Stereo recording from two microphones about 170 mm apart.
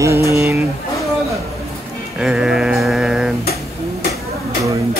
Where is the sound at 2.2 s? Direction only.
5° right (ahead or behind).